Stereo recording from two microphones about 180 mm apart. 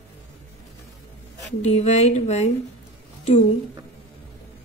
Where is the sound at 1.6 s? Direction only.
40° left (ahead or behind).